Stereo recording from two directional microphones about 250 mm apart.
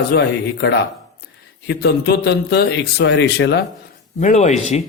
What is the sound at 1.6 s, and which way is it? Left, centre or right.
Speech, left.